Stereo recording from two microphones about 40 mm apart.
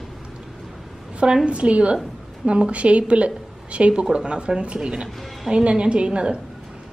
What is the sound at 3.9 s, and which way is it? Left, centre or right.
Speech, centre.